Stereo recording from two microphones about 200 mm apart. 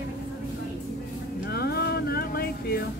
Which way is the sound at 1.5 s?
50° left (ahead or behind).